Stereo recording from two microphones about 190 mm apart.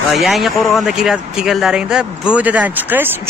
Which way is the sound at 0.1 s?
Centre (ahead or behind).